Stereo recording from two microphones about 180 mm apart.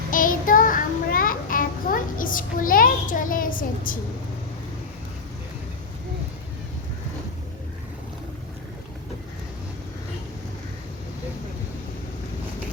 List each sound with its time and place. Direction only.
0.1 s child singing: 50° left (ahead or behind)